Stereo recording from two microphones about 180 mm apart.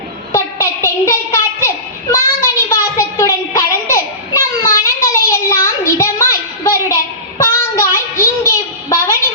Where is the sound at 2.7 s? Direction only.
15° left (ahead or behind).